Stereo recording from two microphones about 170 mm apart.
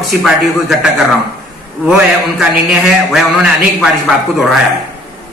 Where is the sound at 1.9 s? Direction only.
5° right (ahead or behind).